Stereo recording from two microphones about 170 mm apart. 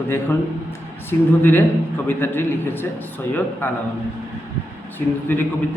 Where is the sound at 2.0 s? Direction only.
10° left (ahead or behind).